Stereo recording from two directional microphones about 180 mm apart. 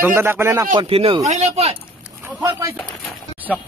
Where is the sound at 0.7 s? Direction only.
30° right (ahead or behind).